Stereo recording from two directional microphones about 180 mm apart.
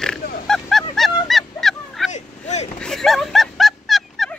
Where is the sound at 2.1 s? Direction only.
40° left (ahead or behind).